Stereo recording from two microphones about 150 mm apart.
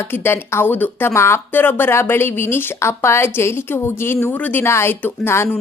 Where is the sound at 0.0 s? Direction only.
15° left (ahead or behind).